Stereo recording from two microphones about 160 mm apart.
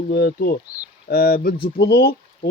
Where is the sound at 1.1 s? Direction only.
65° left (ahead or behind).